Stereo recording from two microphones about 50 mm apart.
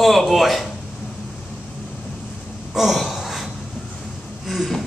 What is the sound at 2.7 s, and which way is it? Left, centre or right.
Gasp, centre.